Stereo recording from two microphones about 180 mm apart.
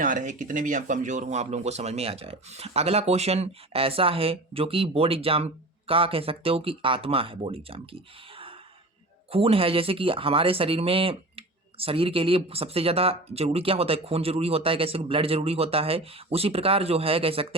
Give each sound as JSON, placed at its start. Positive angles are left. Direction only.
{"t": 0.0, "sound": "speech", "side_deg": -45}